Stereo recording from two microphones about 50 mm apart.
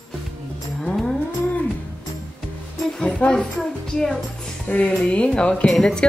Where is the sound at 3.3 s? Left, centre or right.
Centre.